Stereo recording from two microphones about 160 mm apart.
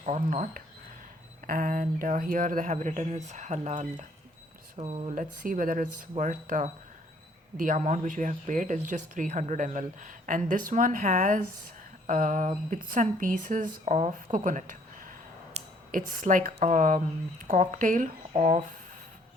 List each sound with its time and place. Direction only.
0.0 s speech: 45° right (ahead or behind)
5.1 s speech: 60° right (ahead or behind)
15.6 s a sound: 40° right (ahead or behind)
15.9 s speech: 55° right (ahead or behind)